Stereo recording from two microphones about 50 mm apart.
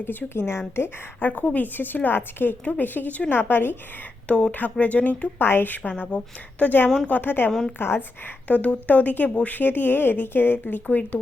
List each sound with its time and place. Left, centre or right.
0.0 s a woman's voice: left
0.3 s a woman's voice: left
1.3 s a woman's voice: left
3.3 s speech: left
4.5 s a woman's voice: left
5.4 s a woman's voice: left
5.9 s speech: left
6.7 s a woman's voice: left
8.4 s a woman's voice: left